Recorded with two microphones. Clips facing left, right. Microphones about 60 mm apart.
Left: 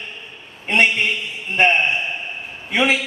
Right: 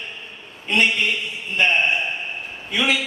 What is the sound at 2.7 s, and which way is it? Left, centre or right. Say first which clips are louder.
Speech: left 3 dB; left.